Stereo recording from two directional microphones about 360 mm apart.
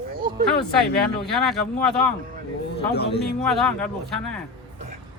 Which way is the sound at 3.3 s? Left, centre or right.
Centre.